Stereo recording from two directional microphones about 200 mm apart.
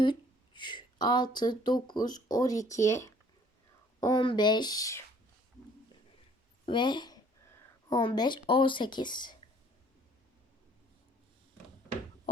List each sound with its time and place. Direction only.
0.0 s speech: 25° left (ahead or behind)
6.7 s speech: 20° left (ahead or behind)